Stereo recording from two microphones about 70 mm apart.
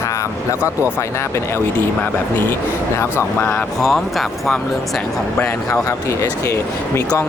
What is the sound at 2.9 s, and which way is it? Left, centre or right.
Speech, left.